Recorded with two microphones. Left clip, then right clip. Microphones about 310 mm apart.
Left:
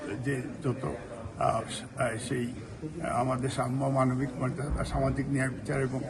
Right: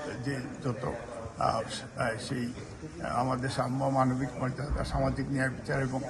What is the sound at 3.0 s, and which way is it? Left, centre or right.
A man's voice, centre.